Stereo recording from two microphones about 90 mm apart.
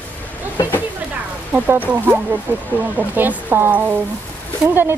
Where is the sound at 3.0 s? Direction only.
20° right (ahead or behind).